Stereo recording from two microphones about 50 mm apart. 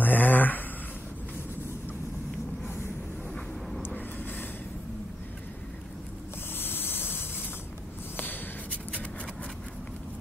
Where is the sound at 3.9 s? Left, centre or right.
Left.